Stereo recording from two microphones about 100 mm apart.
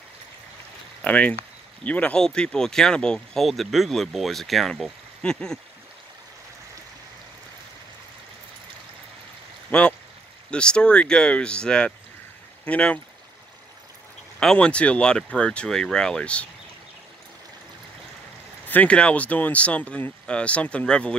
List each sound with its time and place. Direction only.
1.0 s speech: 15° left (ahead or behind)
9.7 s speech: 15° left (ahead or behind)
14.4 s speech: 10° left (ahead or behind)
18.7 s speech: 15° left (ahead or behind)